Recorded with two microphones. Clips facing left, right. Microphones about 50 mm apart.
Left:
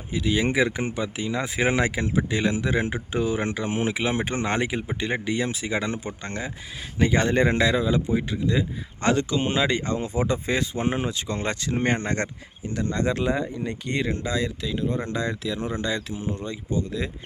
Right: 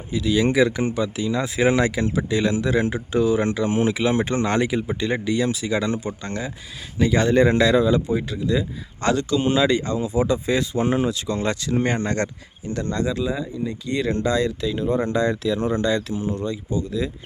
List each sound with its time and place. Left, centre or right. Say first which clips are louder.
0.1 s speech: right 4 dB; left
8.1 s speech: right 2 dB; left
13.1 s speech: even; left
14.1 s speech: right 6 dB; centre
16.4 s speech: right 3 dB; left